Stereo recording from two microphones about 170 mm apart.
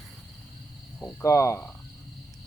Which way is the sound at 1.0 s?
15° left (ahead or behind).